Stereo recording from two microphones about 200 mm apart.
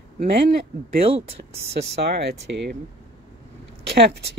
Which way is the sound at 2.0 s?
60° right (ahead or behind).